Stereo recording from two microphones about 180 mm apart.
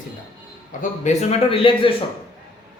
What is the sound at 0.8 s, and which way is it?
Speech, 40° left (ahead or behind).